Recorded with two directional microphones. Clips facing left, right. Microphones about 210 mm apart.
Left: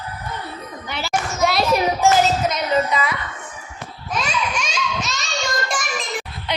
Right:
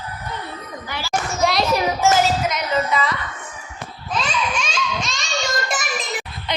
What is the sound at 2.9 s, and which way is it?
Speech, 10° left (ahead or behind).